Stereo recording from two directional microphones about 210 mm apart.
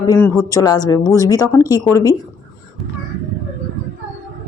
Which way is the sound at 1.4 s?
15° left (ahead or behind).